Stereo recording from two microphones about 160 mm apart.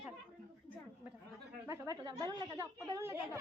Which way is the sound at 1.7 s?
25° right (ahead or behind).